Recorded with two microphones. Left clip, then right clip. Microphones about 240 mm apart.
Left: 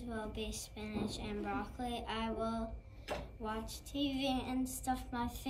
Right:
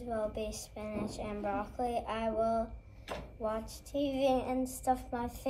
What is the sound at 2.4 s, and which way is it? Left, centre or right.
Speech, right.